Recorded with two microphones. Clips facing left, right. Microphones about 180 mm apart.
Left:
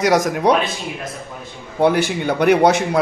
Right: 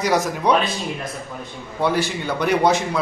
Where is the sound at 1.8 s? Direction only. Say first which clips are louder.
Left 5 dB; 60° left (ahead or behind).